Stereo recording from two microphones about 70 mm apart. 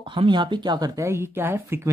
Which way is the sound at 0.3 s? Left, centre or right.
Right.